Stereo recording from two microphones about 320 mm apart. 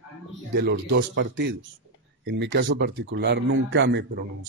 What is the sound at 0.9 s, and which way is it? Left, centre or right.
A man's voice, right.